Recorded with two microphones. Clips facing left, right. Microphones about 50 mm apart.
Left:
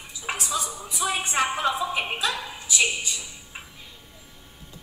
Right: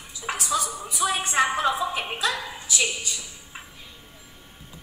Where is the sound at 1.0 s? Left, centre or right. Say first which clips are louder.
Right 1 dB; left.